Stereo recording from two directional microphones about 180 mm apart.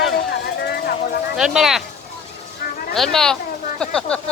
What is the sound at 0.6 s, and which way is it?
Vehicle, 60° left (ahead or behind).